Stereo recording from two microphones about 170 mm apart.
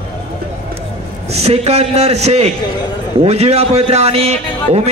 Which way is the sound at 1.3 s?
35° right (ahead or behind).